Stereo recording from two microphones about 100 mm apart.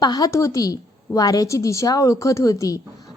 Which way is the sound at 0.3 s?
35° left (ahead or behind).